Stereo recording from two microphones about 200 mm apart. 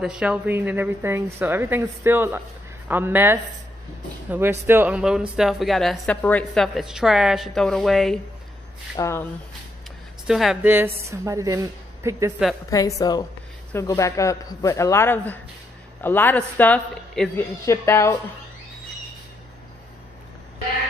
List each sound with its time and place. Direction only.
0.0 s a woman's voice: 5° right (ahead or behind)
8.9 s a man's voice: 15° left (ahead or behind)
10.2 s a woman's voice: centre (ahead or behind)
12.6 s a man's voice: 15° left (ahead or behind)